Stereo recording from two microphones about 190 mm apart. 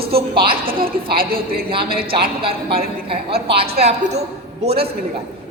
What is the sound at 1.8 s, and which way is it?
Speech, 55° right (ahead or behind).